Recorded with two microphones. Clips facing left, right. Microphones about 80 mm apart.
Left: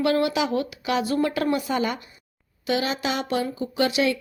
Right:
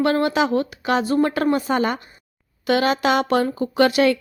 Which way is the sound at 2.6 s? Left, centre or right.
Right.